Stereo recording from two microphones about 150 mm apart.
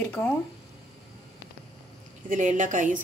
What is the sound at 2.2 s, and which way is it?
Speech, 60° right (ahead or behind).